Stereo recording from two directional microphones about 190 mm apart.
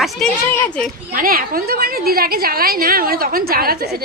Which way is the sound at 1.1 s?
50° right (ahead or behind).